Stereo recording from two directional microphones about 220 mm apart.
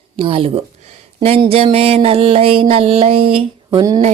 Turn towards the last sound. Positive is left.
turn(degrees=-20)  # may be behind; listen again after turning